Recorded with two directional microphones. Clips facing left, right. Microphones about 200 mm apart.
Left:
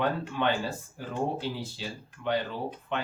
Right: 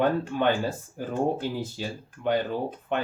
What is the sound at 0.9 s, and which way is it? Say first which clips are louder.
Speech: right 5 dB; 50° right (ahead or behind).